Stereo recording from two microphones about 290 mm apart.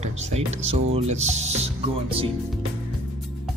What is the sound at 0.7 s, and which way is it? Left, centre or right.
Speech, right.